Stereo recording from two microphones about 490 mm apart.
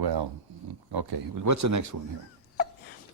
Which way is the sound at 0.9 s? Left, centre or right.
Right.